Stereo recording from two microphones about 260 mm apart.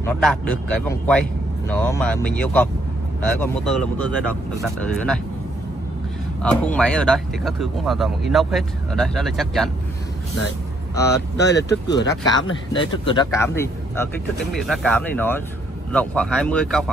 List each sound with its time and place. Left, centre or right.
0.0 s speech: centre
6.4 s speech: centre
11.3 s speech: left
12.1 s speech: centre